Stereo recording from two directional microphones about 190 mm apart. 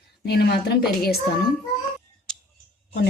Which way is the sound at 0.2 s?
55° left (ahead or behind).